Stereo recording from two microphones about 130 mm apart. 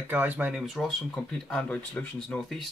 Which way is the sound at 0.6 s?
Centre (ahead or behind).